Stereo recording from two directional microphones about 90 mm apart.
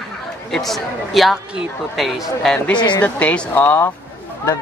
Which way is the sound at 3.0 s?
15° left (ahead or behind).